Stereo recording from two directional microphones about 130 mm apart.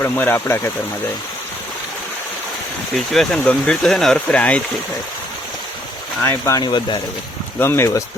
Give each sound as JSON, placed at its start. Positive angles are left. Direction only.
{"t": 0.0, "sound": "speech", "side_deg": 15}
{"t": 2.9, "sound": "speech", "side_deg": 0}
{"t": 6.2, "sound": "speech", "side_deg": 20}
{"t": 7.6, "sound": "speech", "side_deg": 20}